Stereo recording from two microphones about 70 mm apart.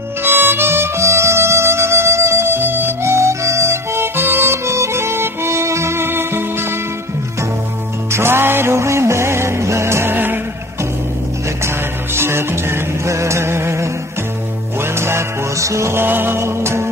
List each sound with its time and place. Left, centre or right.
0.2 s harmonica: right
3.0 s music: right
8.1 s music: right
11.6 s music: right